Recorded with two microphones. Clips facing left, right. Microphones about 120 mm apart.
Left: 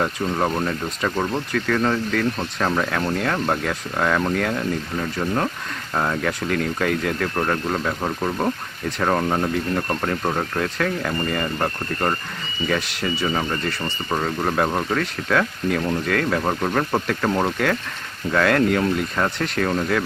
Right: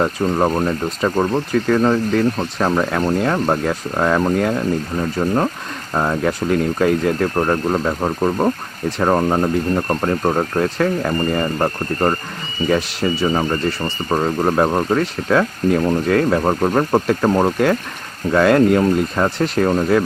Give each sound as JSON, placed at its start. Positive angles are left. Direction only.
{"t": 0.3, "sound": "speech", "side_deg": -25}
{"t": 19.5, "sound": "speech", "side_deg": -25}